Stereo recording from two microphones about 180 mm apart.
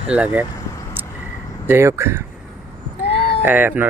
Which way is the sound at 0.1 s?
10° right (ahead or behind).